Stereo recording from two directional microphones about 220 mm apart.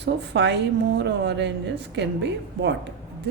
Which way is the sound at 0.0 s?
50° right (ahead or behind).